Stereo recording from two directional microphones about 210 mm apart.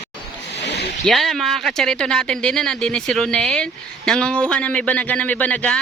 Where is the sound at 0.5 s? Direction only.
55° left (ahead or behind).